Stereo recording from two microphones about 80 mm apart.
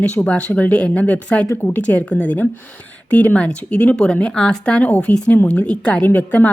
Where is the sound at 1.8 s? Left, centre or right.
Centre.